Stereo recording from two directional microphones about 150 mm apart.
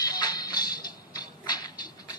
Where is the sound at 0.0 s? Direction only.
25° left (ahead or behind).